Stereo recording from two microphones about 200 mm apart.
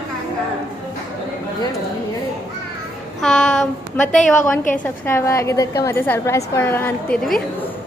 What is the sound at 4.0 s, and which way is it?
Speech, 10° left (ahead or behind).